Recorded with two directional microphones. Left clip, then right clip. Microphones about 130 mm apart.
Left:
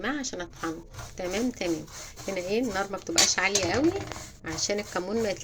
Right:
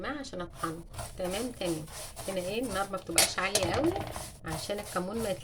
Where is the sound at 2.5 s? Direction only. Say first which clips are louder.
Left 6 dB; 20° left (ahead or behind).